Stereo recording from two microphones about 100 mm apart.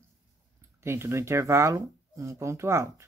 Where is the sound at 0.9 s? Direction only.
25° right (ahead or behind).